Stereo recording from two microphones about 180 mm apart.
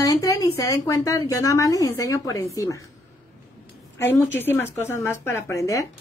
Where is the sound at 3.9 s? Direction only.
15° left (ahead or behind).